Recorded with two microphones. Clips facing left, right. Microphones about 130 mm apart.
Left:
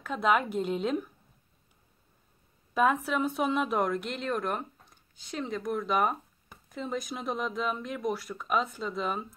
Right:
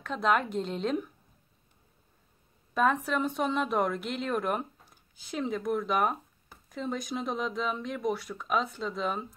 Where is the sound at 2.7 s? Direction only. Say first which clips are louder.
Left 1 dB; 5° left (ahead or behind).